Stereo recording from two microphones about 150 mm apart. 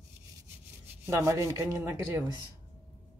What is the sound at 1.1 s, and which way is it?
Speech, 20° right (ahead or behind).